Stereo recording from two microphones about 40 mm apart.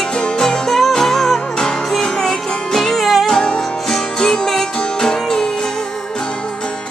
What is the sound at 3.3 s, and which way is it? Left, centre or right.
Music, centre.